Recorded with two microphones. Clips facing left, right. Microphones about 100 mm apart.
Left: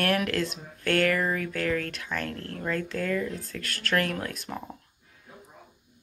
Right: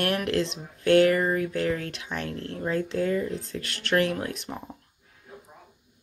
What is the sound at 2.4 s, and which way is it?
Speech, 20° right (ahead or behind).